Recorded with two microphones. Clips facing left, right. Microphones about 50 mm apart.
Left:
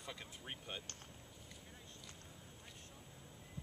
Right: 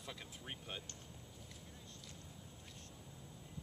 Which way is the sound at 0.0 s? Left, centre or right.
Centre.